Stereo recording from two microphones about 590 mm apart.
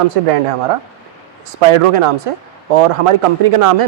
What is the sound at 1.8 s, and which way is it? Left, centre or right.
A woman's voice, right.